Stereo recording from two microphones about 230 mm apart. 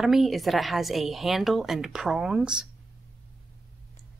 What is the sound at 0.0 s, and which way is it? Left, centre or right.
A woman's voice, centre.